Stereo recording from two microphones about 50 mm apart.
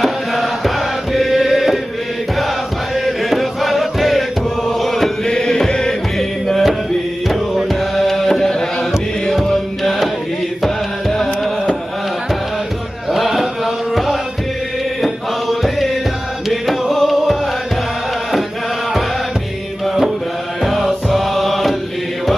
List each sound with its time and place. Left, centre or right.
1.1 s chant: centre
3.3 s music: centre
5.3 s music: centre
13.1 s chant: centre
16.4 s music: centre
20.6 s music: centre